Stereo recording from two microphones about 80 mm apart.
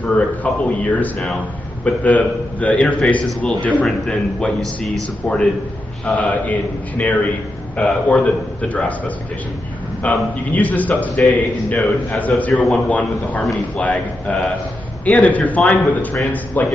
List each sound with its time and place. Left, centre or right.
0.0 s a man's voice: centre